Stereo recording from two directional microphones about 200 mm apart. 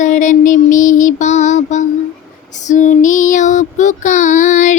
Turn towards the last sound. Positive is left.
turn(degrees=40)  # may be behind; listen again after turning